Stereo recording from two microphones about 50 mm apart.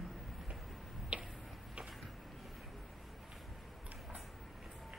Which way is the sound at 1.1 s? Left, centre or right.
Right.